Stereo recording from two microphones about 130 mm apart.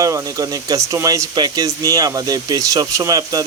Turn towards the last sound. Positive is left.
turn(degrees=-30)  # may be behind; listen again after turning